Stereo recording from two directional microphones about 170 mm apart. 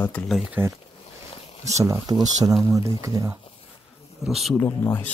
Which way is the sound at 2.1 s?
25° right (ahead or behind).